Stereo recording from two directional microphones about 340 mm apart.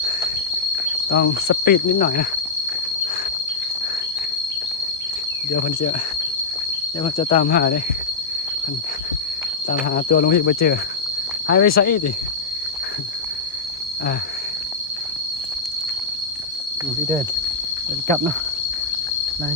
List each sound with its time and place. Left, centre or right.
1.1 s cricket: left
7.0 s cricket: centre
9.6 s cricket: left